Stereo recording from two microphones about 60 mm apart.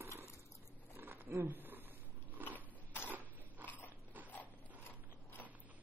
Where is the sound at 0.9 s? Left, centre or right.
Right.